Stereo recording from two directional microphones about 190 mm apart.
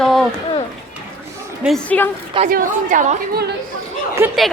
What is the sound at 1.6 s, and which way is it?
Speech, 5° left (ahead or behind).